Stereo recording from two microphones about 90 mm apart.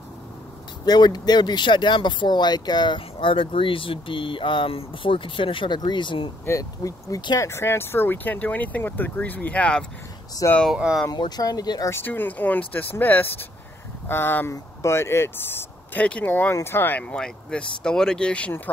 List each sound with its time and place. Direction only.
0.8 s speech: 50° left (ahead or behind); by 5.8 s 70° left (ahead or behind)
5.8 s speech: 60° left (ahead or behind)
6.4 s speech: 35° left (ahead or behind); by 9.8 s 10° left (ahead or behind)
10.7 s speech: 5° right (ahead or behind)
11.1 s speech: 50° left (ahead or behind)
11.9 s speech: 25° left (ahead or behind)
16.3 s speech: 25° left (ahead or behind)
17.0 s speech: 10° left (ahead or behind)